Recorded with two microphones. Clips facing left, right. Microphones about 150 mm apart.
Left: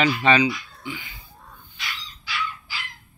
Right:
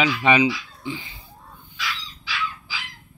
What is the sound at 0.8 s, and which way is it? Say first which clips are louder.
Music: right 4 dB; 30° right (ahead or behind).